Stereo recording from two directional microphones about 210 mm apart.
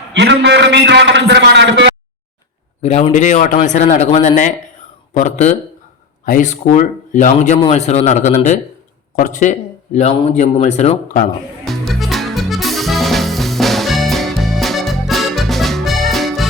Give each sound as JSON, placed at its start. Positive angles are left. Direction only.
{"t": 0.1, "sound": "a man's voice", "side_deg": -55}
{"t": 2.8, "sound": "speech", "side_deg": 30}
{"t": 11.6, "sound": "music", "side_deg": 0}